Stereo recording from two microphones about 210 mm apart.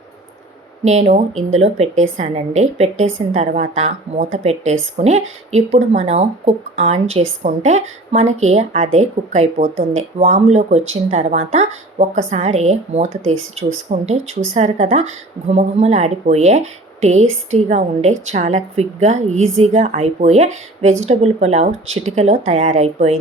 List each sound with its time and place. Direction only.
0.9 s a woman's voice: 30° right (ahead or behind)
13.2 s speech: 70° right (ahead or behind)
13.9 s a woman's voice: 30° right (ahead or behind)